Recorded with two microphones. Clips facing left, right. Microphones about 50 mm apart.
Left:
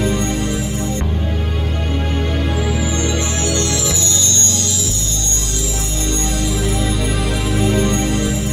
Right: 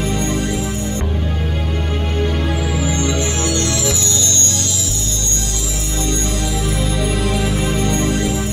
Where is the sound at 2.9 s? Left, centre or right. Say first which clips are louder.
Right 1 dB; left.